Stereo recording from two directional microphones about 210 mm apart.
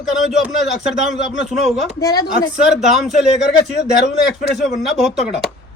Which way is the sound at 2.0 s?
15° left (ahead or behind).